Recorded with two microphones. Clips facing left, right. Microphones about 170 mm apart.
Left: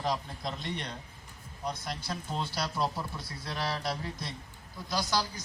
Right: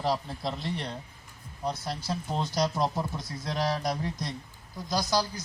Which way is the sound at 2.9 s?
45° right (ahead or behind).